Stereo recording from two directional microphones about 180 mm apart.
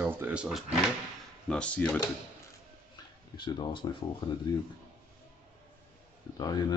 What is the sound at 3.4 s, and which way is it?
Speech, 25° left (ahead or behind).